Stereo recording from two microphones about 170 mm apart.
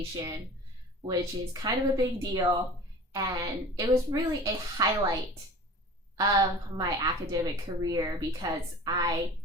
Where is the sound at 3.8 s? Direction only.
20° right (ahead or behind).